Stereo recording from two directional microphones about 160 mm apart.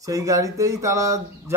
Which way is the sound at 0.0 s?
20° right (ahead or behind).